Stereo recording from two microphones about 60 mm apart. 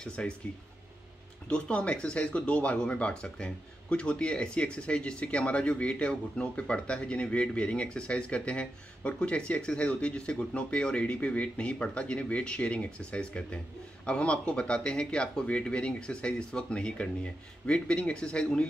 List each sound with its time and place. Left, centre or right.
0.0 s speech: centre
1.5 s speech: centre